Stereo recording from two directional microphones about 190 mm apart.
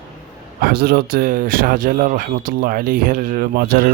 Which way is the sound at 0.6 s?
55° right (ahead or behind).